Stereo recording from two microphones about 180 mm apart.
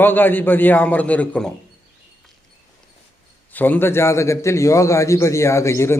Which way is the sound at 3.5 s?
10° left (ahead or behind).